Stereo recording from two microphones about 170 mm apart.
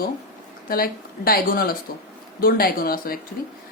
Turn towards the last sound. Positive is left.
turn(degrees=60)  # may be behind; listen again after turning